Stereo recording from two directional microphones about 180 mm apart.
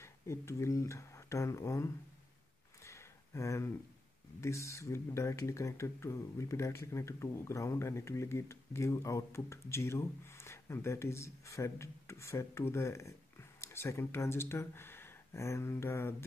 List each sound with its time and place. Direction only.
0.0 s speech: 15° left (ahead or behind)
2.8 s a sound: 15° left (ahead or behind)
4.4 s speech: 15° left (ahead or behind)